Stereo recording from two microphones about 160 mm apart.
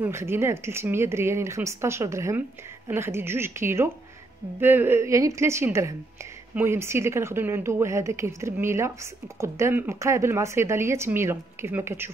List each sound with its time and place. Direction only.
0.0 s speech: 15° right (ahead or behind)